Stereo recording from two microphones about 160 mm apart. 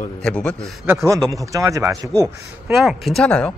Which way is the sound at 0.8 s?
15° right (ahead or behind).